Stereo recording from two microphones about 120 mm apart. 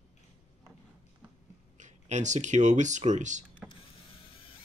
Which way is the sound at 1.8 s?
80° right.